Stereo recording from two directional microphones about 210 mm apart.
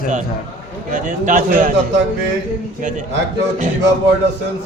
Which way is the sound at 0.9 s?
40° right (ahead or behind).